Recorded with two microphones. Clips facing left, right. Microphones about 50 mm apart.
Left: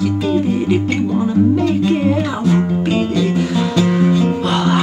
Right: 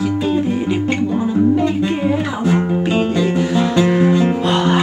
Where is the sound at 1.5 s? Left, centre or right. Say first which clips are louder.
Left 2 dB; centre.